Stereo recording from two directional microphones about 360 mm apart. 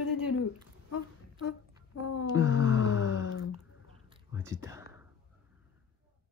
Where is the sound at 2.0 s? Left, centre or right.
Left.